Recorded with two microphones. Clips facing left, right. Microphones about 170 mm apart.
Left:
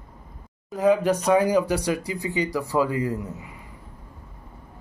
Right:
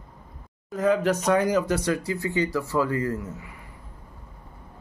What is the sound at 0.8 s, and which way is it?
Speech, 15° left (ahead or behind).